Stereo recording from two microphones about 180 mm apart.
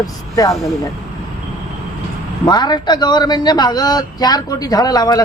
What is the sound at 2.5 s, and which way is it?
Speech, 25° left (ahead or behind).